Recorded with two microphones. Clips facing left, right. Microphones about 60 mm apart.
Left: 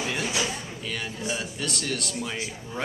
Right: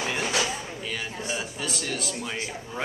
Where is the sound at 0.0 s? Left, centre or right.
Centre.